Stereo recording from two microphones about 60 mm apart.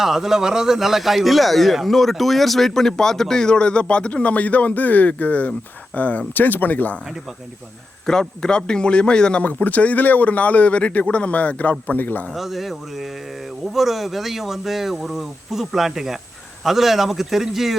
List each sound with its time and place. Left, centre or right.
0.0 s a man's voice: centre; by 7.0 s left
8.0 s a man's voice: centre
9.4 s a man's voice: left
12.3 s speech: centre